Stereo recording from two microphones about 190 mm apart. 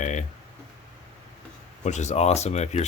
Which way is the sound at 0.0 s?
40° left (ahead or behind).